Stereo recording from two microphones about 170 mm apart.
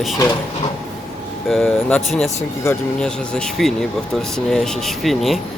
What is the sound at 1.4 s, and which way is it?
Speech, centre (ahead or behind).